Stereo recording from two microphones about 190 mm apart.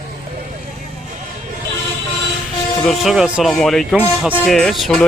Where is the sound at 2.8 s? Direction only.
Centre (ahead or behind).